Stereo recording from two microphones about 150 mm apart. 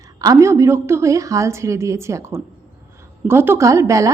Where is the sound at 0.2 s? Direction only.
20° right (ahead or behind).